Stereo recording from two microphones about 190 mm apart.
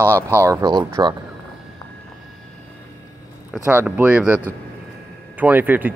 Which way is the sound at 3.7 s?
10° right (ahead or behind).